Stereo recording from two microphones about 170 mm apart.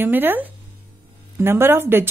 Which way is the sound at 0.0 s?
10° right (ahead or behind).